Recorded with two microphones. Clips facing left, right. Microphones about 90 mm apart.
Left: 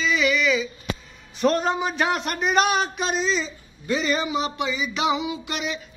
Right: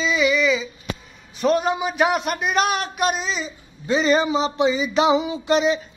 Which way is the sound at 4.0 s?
35° right (ahead or behind).